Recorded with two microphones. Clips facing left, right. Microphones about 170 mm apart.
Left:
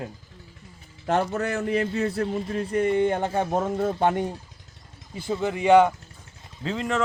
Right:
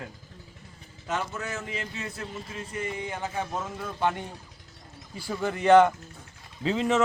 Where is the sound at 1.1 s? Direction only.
60° left (ahead or behind).